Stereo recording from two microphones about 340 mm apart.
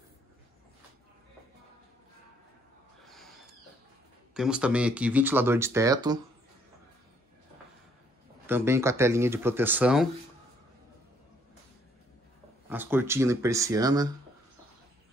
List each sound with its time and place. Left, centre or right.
4.3 s speech: centre
8.5 s speech: centre
12.6 s speech: centre